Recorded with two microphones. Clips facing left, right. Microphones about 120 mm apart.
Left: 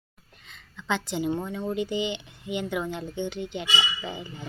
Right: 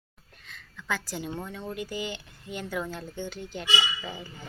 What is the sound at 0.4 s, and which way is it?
Speech, 25° left (ahead or behind).